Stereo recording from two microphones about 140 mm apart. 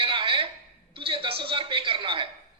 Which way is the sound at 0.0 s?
35° right (ahead or behind).